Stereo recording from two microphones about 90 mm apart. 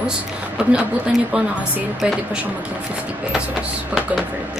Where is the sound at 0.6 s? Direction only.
10° right (ahead or behind).